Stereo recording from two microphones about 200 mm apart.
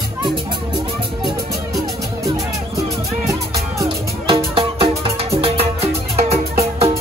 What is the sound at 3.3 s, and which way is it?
Music, 15° right (ahead or behind).